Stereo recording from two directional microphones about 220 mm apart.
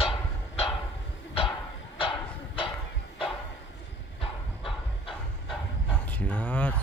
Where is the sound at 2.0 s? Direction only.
25° left (ahead or behind).